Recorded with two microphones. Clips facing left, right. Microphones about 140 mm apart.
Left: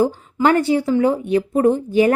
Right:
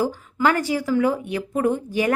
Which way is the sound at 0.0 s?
30° left (ahead or behind).